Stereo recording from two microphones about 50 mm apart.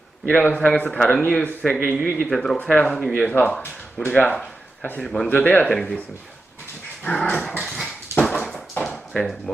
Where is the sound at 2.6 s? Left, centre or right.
Left.